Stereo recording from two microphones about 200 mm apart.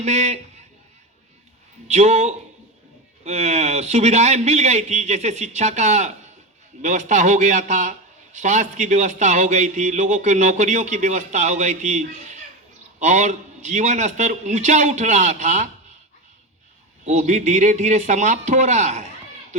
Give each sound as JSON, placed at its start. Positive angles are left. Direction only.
{"t": 0.0, "sound": "a man's voice", "side_deg": -35}
{"t": 1.9, "sound": "a man's voice", "side_deg": -35}
{"t": 17.1, "sound": "a man's voice", "side_deg": -35}